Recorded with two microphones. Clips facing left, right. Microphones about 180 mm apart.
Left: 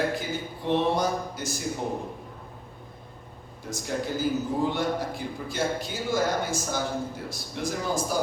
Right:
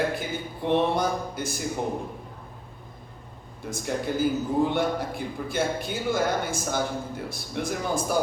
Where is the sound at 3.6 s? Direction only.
55° right (ahead or behind).